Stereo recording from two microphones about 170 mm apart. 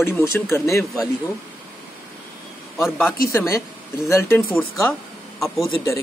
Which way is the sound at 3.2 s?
15° left (ahead or behind).